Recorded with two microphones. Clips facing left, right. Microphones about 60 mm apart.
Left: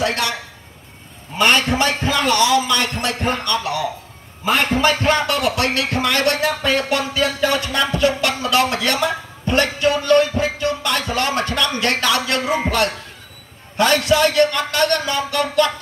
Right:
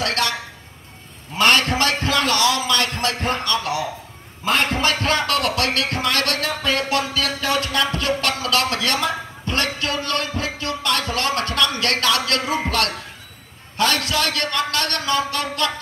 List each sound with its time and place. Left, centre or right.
0.0 s a sound: centre
1.4 s music: centre
5.8 s music: left
13.7 s music: left